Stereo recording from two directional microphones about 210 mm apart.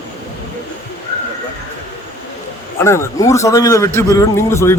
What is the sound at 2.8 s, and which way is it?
A man's voice, 15° left (ahead or behind).